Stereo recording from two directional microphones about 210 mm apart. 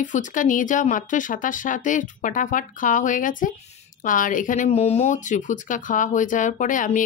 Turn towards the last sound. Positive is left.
turn(degrees=40)  # may be behind; listen again after turning